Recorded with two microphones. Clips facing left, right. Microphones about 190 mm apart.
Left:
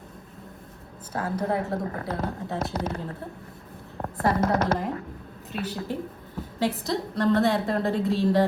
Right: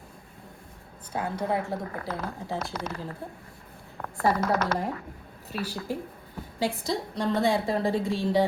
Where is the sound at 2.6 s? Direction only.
25° left (ahead or behind).